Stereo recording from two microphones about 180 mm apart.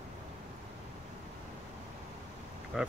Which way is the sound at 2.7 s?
5° right (ahead or behind).